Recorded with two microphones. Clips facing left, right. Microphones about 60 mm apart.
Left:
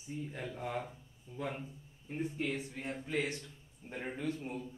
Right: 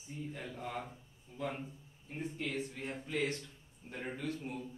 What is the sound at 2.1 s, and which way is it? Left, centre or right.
Speech, centre.